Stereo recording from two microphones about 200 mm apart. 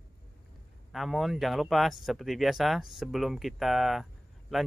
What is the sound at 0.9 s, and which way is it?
Speech, centre (ahead or behind).